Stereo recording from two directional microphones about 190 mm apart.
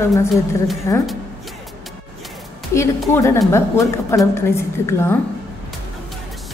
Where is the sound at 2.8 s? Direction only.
15° left (ahead or behind).